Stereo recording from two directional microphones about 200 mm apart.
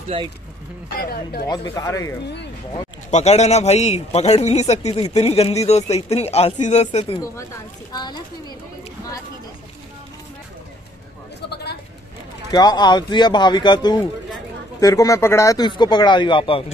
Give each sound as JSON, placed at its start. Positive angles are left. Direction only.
{"t": 0.1, "sound": "speech", "side_deg": -25}
{"t": 0.9, "sound": "speech", "side_deg": 50}
{"t": 1.5, "sound": "speech", "side_deg": 20}
{"t": 3.1, "sound": "a man's voice", "side_deg": 35}
{"t": 7.9, "sound": "speech", "side_deg": 20}
{"t": 11.4, "sound": "a sound", "side_deg": 55}
{"t": 12.4, "sound": "speech", "side_deg": 20}